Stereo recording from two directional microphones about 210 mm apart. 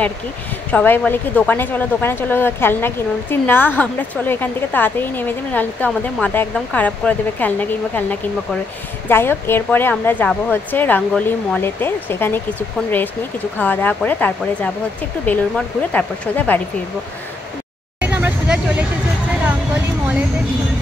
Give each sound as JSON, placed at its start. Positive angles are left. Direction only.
{"t": 0.7, "sound": "speech", "side_deg": 10}
{"t": 13.6, "sound": "speech", "side_deg": 10}
{"t": 18.0, "sound": "vehicle", "side_deg": -10}
{"t": 19.4, "sound": "a sound", "side_deg": -5}